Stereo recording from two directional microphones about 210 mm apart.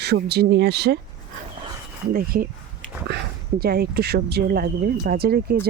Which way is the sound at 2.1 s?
45° right (ahead or behind).